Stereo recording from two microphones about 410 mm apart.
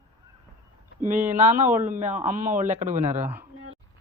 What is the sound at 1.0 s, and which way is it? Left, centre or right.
Speech, centre.